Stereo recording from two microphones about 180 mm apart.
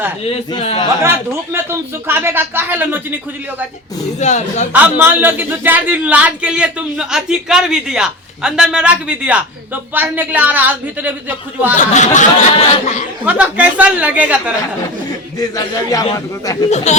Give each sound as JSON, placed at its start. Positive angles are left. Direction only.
{"t": 0.3, "sound": "speech", "side_deg": 35}
{"t": 1.0, "sound": "a man's voice", "side_deg": -15}
{"t": 4.2, "sound": "speech", "side_deg": 40}
{"t": 4.7, "sound": "a man's voice", "side_deg": -10}
{"t": 11.8, "sound": "speech", "side_deg": 45}
{"t": 13.2, "sound": "a man's voice", "side_deg": -5}
{"t": 15.4, "sound": "a man's voice", "side_deg": 20}
{"t": 16.6, "sound": "speech", "side_deg": 40}